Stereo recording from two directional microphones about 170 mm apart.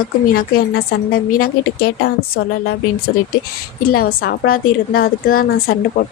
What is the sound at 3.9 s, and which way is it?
A woman's voice, 60° left (ahead or behind).